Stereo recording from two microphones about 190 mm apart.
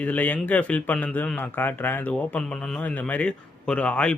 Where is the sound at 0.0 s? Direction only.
10° left (ahead or behind).